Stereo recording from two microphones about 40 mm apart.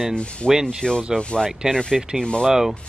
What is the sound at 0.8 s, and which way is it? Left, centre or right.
Speech, centre.